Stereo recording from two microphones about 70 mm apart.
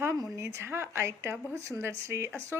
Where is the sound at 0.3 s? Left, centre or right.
Right.